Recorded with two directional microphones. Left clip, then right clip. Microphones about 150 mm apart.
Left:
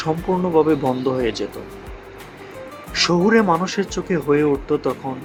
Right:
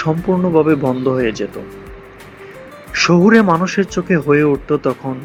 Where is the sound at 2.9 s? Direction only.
15° right (ahead or behind).